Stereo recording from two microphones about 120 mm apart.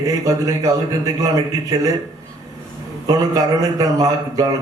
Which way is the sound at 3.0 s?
30° right (ahead or behind).